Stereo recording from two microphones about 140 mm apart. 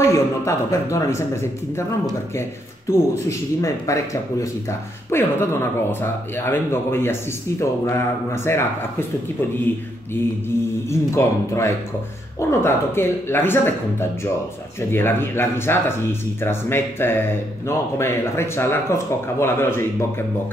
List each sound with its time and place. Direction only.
0.1 s speech: 20° left (ahead or behind)
10.9 s speech: 20° left (ahead or behind)